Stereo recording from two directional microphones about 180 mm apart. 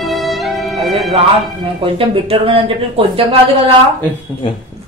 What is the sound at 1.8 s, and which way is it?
Speech, 30° right (ahead or behind).